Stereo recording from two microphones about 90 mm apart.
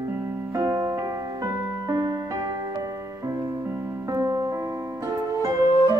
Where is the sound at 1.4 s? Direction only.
40° right (ahead or behind).